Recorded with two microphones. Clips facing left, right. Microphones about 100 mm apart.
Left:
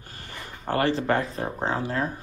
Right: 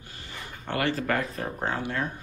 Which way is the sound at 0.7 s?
35° left (ahead or behind).